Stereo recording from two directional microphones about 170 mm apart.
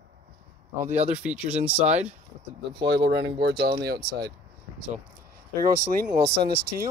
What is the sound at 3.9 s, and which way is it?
Speech, 20° right (ahead or behind).